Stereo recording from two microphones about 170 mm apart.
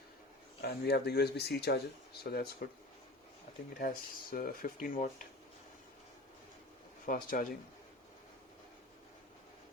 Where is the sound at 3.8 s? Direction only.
55° left (ahead or behind).